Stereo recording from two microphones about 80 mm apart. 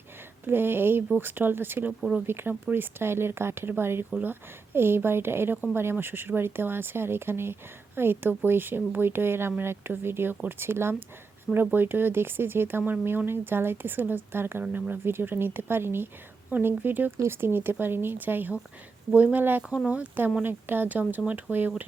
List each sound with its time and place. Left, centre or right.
0.4 s speech: right
1.9 s speech: centre
2.2 s speech: right